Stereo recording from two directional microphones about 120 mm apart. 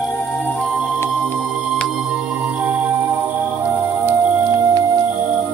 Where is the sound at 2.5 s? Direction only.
15° right (ahead or behind).